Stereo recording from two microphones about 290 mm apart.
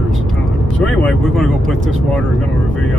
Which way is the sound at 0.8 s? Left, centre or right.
Centre.